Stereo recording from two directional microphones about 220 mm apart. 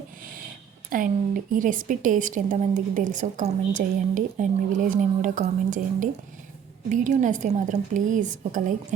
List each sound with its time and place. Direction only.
0.9 s a woman's voice: 40° right (ahead or behind)